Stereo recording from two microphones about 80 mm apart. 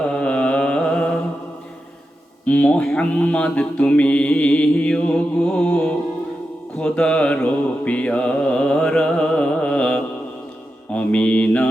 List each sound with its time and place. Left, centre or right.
0.1 s music: centre
2.5 s mantra: centre